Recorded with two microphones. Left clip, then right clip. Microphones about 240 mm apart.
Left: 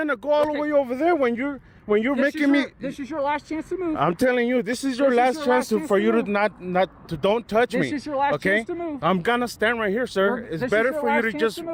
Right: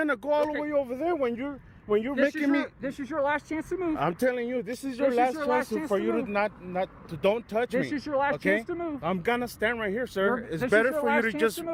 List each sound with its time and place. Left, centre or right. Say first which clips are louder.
0.0 s speech: left 5 dB; centre
0.6 s speech: left 7 dB; left; by 11.7 s centre